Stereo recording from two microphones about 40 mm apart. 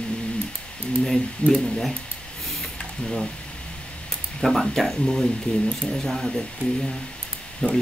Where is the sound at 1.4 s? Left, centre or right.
Left.